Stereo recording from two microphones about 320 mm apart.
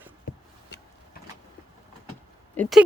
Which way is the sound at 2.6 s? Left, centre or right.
Centre.